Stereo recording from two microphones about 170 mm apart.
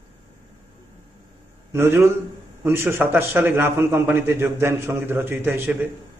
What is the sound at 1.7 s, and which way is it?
A man's voice, 15° right (ahead or behind).